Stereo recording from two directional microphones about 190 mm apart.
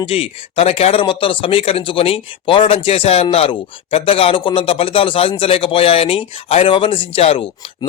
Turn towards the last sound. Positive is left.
turn(degrees=30)  # may be behind; listen again after turning